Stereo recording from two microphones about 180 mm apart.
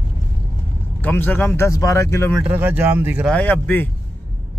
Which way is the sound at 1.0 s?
10° left (ahead or behind).